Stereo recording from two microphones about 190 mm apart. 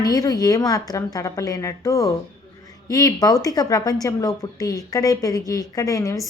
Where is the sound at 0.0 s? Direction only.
20° left (ahead or behind).